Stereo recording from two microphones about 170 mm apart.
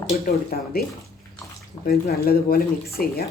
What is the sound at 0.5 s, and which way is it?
Speech, 60° left (ahead or behind).